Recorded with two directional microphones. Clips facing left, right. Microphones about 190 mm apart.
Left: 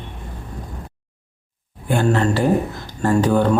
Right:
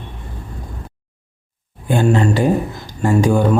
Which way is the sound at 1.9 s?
15° right (ahead or behind).